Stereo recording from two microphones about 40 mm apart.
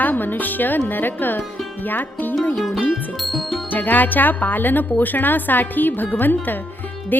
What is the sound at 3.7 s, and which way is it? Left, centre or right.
Speech, left.